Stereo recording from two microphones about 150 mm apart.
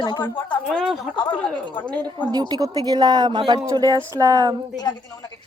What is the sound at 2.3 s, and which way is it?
Speech, 25° right (ahead or behind).